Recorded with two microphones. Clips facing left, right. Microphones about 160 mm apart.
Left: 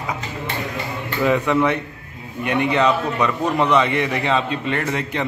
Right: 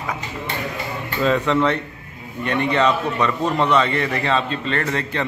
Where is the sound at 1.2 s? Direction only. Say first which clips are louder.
Even; 15° left (ahead or behind).